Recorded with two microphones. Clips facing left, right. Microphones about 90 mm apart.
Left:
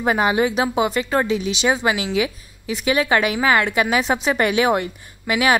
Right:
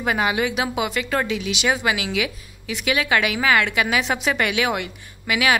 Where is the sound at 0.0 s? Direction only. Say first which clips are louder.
Left 3 dB; 30° left (ahead or behind).